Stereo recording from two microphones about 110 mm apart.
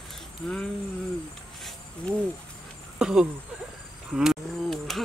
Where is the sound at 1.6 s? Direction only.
5° left (ahead or behind).